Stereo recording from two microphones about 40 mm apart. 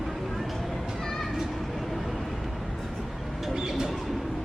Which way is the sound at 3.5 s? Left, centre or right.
Centre.